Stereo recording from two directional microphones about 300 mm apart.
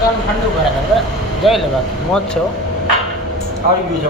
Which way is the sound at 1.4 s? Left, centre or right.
Centre.